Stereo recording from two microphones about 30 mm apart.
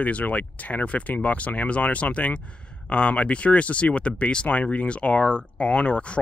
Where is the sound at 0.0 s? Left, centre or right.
Left.